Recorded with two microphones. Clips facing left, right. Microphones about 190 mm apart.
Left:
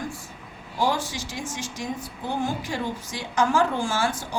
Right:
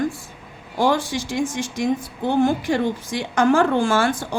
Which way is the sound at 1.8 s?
75° right (ahead or behind).